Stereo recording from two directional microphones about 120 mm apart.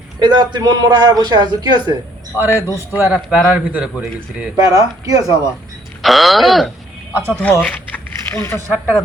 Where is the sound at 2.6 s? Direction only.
25° left (ahead or behind).